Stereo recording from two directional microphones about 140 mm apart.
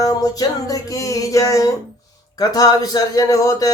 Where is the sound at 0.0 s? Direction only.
25° left (ahead or behind).